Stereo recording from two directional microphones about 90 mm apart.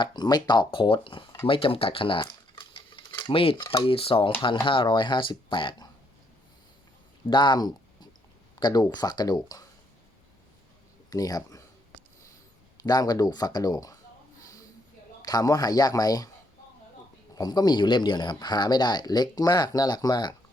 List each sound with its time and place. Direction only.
0.0 s speech: 55° left (ahead or behind); by 2.2 s 75° left (ahead or behind)
2.6 s cutlery: 65° left (ahead or behind)
3.1 s cutlery: 50° left (ahead or behind)
3.3 s speech: 85° left
4.6 s speech: 70° left (ahead or behind)
7.3 s speech: 55° left (ahead or behind)
11.1 s speech: 45° left (ahead or behind)
12.8 s speech: 45° left (ahead or behind)
15.2 s speech: 45° left (ahead or behind)
17.3 s speech: 50° left (ahead or behind)